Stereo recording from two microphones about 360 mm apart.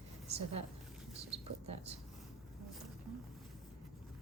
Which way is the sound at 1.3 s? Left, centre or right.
Centre.